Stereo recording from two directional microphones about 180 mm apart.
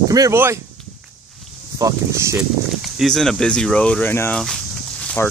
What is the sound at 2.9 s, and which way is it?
Speech, centre (ahead or behind).